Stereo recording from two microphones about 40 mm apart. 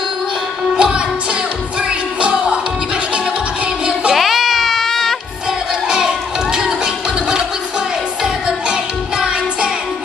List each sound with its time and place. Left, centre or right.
0.7 s music: right
2.1 s music: right
4.1 s a sound: centre